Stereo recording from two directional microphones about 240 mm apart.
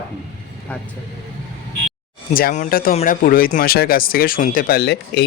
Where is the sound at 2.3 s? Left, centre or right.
Left.